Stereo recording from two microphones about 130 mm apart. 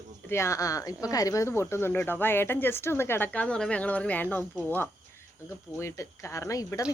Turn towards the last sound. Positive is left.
turn(degrees=25)  # may be behind; listen again after turning